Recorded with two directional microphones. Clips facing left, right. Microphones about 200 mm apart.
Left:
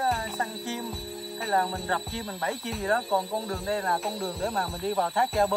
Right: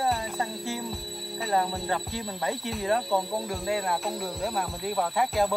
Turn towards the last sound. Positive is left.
turn(degrees=-5)  # may be behind; listen again after turning